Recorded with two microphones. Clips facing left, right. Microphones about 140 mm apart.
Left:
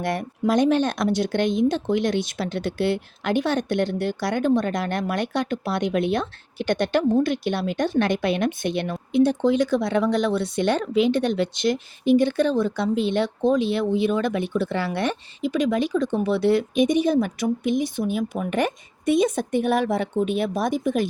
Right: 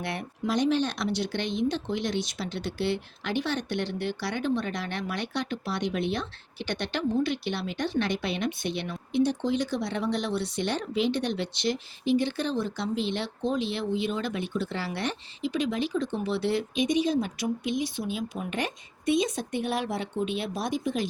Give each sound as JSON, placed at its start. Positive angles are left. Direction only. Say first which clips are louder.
{"t": 0.0, "sound": "speech", "louder": "left 8 dB", "side_deg": 45}